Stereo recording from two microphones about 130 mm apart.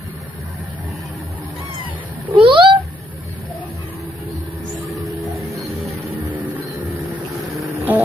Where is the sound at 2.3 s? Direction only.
40° right (ahead or behind).